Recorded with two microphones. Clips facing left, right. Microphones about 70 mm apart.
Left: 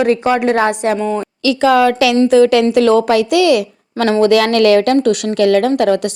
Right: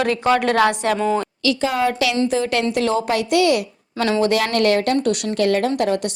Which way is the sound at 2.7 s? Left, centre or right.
Left.